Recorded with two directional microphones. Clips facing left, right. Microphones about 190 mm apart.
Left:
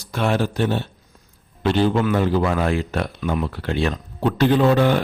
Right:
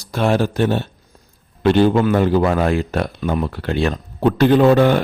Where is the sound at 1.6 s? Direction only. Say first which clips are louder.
Right 5 dB; 55° right (ahead or behind).